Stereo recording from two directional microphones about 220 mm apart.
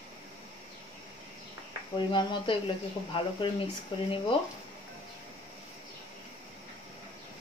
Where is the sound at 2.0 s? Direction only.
20° left (ahead or behind).